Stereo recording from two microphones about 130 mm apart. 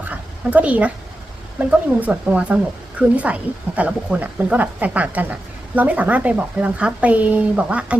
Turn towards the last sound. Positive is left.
turn(degrees=-10)  # may be behind; listen again after turning